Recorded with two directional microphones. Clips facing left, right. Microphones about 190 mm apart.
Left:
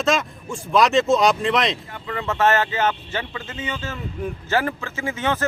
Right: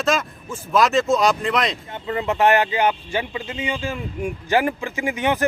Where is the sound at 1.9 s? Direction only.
25° right (ahead or behind).